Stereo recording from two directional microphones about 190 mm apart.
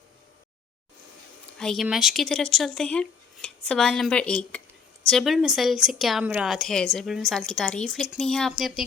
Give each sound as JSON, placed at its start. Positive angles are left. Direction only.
{"t": 1.5, "sound": "speech", "side_deg": 0}